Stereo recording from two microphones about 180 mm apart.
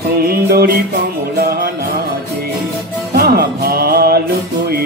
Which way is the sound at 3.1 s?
60° right (ahead or behind).